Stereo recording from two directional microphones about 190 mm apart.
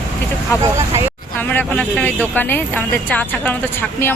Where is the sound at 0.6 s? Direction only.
15° right (ahead or behind).